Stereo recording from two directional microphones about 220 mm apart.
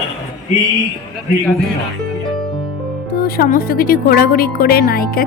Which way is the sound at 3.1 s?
45° left (ahead or behind).